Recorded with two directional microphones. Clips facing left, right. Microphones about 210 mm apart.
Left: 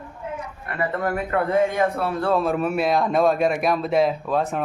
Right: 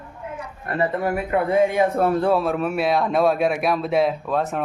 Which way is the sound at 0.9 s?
15° right (ahead or behind).